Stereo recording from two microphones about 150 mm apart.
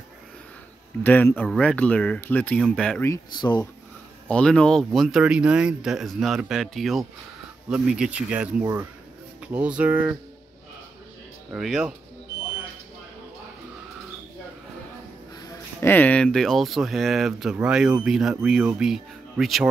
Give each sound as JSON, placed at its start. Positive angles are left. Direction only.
{"t": 1.0, "sound": "speech", "side_deg": 10}
{"t": 2.6, "sound": "speech", "side_deg": 0}
{"t": 3.3, "sound": "speech", "side_deg": 30}
{"t": 4.3, "sound": "speech", "side_deg": 5}
{"t": 11.5, "sound": "speech", "side_deg": -5}
{"t": 15.4, "sound": "speech", "side_deg": 15}